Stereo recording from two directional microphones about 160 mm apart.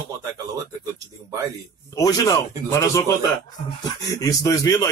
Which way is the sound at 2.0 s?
20° left (ahead or behind).